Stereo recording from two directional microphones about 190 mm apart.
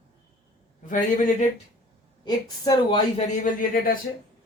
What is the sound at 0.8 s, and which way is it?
Speech, 45° left (ahead or behind).